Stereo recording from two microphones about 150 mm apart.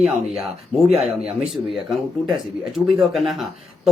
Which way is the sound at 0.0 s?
Centre (ahead or behind).